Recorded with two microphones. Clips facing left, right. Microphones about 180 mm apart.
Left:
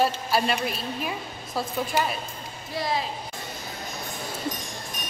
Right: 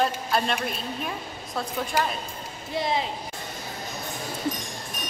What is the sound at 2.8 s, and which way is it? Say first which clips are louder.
Speech: right 1 dB; 20° right (ahead or behind).